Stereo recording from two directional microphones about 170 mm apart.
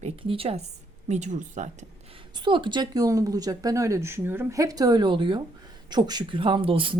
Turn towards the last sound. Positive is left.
turn(degrees=-30)  # may be behind; listen again after turning